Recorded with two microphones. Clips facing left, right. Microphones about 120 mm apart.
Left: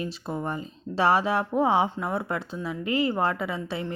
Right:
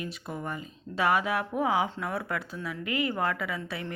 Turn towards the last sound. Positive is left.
turn(degrees=25)  # may be behind; listen again after turning